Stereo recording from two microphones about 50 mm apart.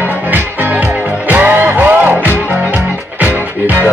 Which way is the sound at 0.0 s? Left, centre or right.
Right.